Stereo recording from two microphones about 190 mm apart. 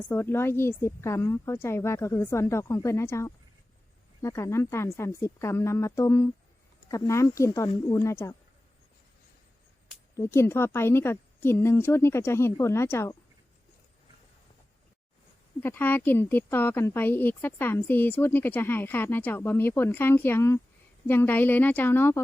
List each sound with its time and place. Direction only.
0.1 s a woman's voice: 10° left (ahead or behind)
10.3 s a woman's voice: 10° left (ahead or behind)
15.6 s a woman's voice: 10° left (ahead or behind)